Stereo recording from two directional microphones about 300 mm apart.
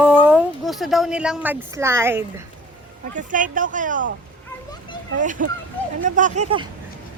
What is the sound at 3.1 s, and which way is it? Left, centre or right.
Speech, right.